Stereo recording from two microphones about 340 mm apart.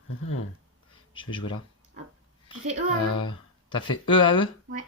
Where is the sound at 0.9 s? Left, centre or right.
Centre.